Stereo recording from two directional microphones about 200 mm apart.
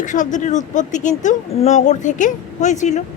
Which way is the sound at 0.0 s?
40° left (ahead or behind).